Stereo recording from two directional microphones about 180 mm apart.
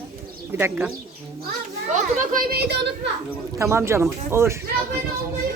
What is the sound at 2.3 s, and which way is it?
Speech, 60° right (ahead or behind).